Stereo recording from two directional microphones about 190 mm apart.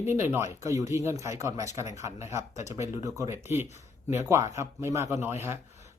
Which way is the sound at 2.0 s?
35° left (ahead or behind).